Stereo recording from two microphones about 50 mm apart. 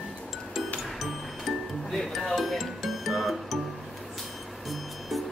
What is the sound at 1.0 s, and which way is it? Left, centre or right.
Music, centre.